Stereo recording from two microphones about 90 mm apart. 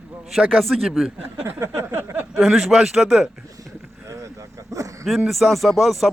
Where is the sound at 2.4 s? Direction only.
Centre (ahead or behind).